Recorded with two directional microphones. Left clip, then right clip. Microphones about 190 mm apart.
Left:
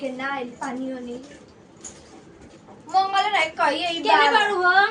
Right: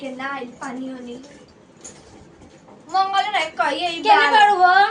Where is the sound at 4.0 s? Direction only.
50° right (ahead or behind).